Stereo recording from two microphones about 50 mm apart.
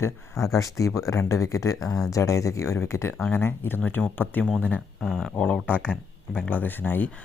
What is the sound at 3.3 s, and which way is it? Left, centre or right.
Speech, left.